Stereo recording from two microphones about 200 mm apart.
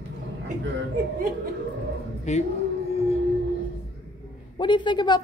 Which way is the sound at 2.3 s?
35° left (ahead or behind).